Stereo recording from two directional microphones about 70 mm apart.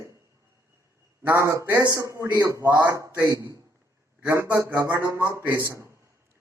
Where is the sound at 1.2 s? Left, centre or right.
Right.